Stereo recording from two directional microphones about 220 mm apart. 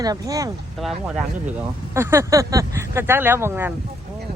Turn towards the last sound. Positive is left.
turn(degrees=-10)  # may be behind; listen again after turning